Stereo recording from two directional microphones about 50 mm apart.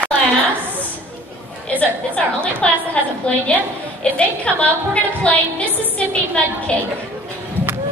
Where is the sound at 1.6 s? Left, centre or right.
Left.